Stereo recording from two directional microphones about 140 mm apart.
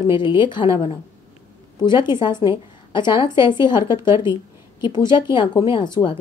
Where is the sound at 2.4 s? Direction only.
35° left (ahead or behind).